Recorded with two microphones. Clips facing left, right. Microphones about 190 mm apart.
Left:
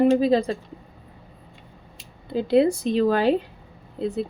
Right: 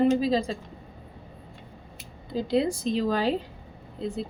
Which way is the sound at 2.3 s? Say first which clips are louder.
Left 6 dB; 60° left (ahead or behind).